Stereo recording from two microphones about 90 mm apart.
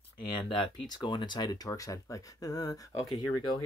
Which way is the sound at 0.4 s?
70° left (ahead or behind).